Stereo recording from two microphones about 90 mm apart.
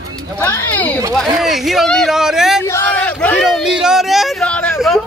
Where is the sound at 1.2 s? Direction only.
Centre (ahead or behind).